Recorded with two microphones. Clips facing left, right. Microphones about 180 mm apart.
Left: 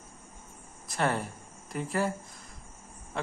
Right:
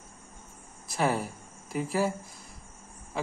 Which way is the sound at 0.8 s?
5° right (ahead or behind).